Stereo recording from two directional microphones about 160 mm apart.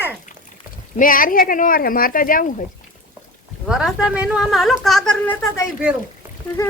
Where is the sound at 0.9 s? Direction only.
60° left (ahead or behind).